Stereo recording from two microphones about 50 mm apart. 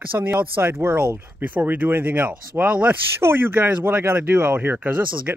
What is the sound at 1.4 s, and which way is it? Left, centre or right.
Speech, right.